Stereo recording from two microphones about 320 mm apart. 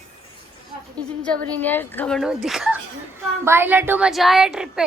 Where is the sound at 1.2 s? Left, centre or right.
Centre.